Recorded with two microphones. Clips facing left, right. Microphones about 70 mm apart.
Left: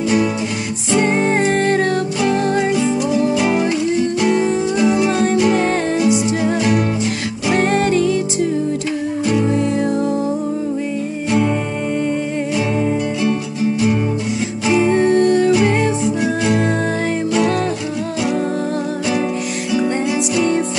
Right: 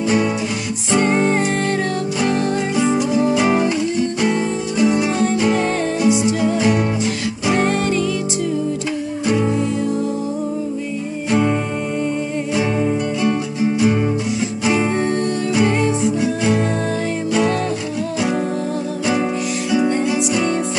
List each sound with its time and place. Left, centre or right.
1.0 s music: left
2.7 s music: centre
6.0 s music: centre
7.5 s music: left
14.9 s music: left
16.0 s music: centre
19.7 s music: centre